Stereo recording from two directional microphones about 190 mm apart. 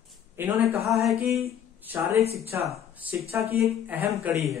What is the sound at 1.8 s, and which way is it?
Speech, 10° right (ahead or behind).